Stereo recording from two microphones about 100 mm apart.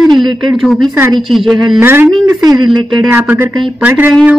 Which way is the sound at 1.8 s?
20° right (ahead or behind).